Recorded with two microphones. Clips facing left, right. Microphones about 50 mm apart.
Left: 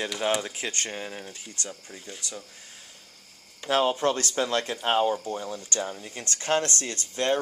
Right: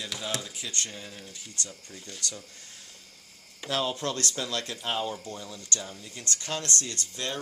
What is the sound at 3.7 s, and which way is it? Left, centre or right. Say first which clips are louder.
Speech: left 6 dB; left.